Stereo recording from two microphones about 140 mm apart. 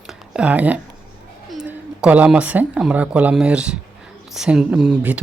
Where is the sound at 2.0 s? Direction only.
10° right (ahead or behind).